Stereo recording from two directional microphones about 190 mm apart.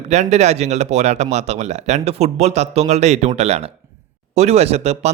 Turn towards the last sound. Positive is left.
turn(degrees=-35)  # may be behind; listen again after turning